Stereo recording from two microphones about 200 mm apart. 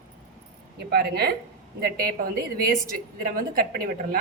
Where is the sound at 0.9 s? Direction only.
50° right (ahead or behind).